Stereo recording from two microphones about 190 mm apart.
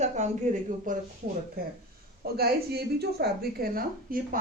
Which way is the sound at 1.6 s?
50° right (ahead or behind).